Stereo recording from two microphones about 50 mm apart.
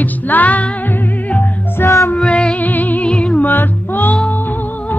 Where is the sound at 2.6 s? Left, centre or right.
Left.